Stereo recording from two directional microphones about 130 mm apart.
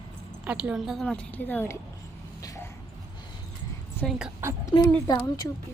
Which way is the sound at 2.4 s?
25° left (ahead or behind).